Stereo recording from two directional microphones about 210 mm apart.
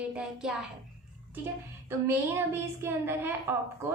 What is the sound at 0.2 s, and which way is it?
Speech, 5° right (ahead or behind).